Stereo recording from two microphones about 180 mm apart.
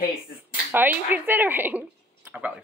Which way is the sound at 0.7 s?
10° right (ahead or behind).